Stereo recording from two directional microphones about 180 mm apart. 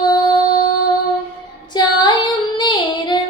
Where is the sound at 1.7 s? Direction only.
25° left (ahead or behind).